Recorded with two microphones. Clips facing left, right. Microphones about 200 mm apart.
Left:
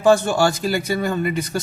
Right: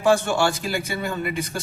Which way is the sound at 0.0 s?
40° left (ahead or behind).